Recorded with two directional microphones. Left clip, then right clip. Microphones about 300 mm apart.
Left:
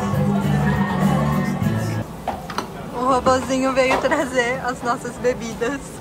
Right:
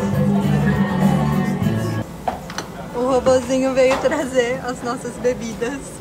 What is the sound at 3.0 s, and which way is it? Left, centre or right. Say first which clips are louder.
Speech: right 1 dB; centre.